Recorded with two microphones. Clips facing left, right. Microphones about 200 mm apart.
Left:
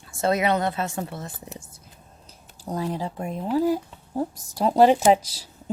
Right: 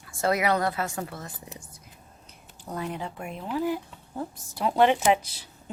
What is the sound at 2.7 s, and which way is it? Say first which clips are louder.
Speech: left 5 dB; 35° left (ahead or behind).